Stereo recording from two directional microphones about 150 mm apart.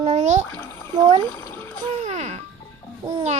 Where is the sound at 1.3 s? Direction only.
15° left (ahead or behind).